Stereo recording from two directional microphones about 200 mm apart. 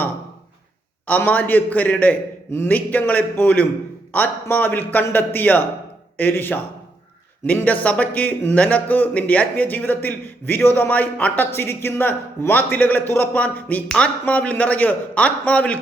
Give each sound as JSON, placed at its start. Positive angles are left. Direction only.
{"t": 1.0, "sound": "speech", "side_deg": 10}